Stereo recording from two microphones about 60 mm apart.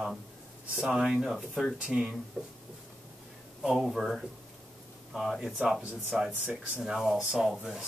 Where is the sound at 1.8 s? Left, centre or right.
Centre.